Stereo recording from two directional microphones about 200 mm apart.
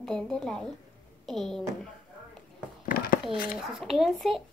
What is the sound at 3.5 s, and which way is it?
Speech, centre (ahead or behind).